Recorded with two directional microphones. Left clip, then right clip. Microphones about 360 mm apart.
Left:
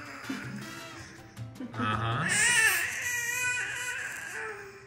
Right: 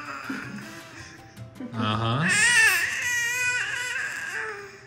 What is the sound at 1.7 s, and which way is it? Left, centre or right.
Baby cry, centre.